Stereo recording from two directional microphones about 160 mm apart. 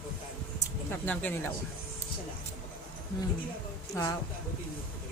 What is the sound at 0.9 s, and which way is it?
Speech, 10° left (ahead or behind).